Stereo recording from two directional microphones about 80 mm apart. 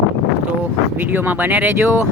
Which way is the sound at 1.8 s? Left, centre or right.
Right.